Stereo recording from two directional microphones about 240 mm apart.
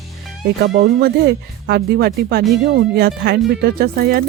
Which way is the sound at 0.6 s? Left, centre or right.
Right.